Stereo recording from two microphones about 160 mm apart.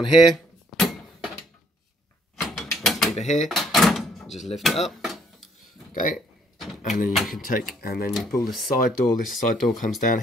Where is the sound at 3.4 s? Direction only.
Centre (ahead or behind).